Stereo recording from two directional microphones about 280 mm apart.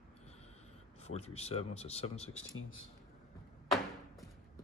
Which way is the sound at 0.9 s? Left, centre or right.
Left.